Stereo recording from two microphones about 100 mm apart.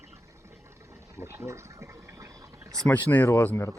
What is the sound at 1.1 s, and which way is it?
Speech, 30° right (ahead or behind).